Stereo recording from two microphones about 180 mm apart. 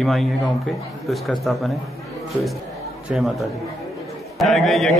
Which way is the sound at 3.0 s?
Centre (ahead or behind).